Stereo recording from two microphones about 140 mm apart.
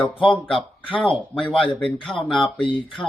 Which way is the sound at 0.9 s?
40° left (ahead or behind).